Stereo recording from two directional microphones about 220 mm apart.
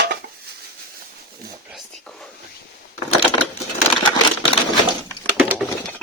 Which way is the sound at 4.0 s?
20° left (ahead or behind).